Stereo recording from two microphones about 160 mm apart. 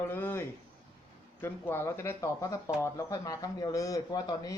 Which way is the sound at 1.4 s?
15° left (ahead or behind).